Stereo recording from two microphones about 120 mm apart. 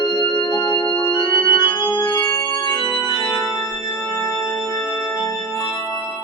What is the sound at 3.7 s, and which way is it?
Music, 20° left (ahead or behind).